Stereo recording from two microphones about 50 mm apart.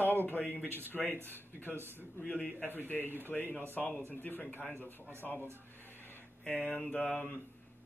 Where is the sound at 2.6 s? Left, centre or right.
Left.